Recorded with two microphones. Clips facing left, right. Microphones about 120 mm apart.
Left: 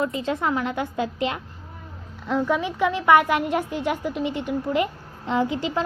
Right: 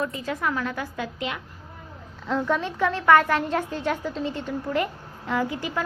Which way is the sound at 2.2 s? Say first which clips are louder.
Left 2 dB; 10° left (ahead or behind).